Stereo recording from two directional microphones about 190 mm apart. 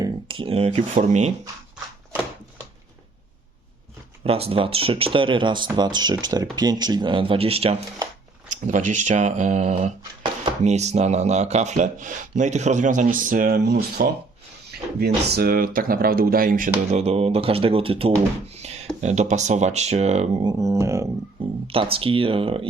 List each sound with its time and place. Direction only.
0.0 s speech: 25° right (ahead or behind)
4.2 s speech: 30° right (ahead or behind)
8.6 s speech: 40° right (ahead or behind)
16.9 s speech: 35° right (ahead or behind)
20.5 s speech: 15° right (ahead or behind)
21.7 s speech: 30° right (ahead or behind)